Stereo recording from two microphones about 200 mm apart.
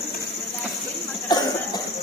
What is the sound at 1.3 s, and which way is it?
Cough, 20° left (ahead or behind).